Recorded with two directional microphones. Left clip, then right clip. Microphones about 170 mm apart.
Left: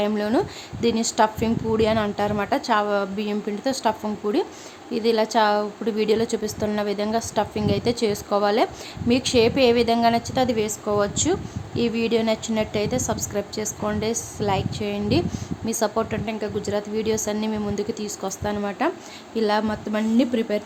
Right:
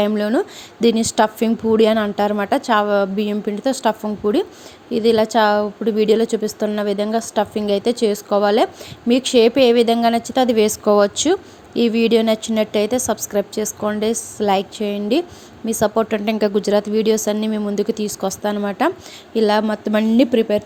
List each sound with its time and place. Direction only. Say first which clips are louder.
0.1 s a woman's voice: right 4 dB; 20° right (ahead or behind); by 20.6 s 35° right (ahead or behind)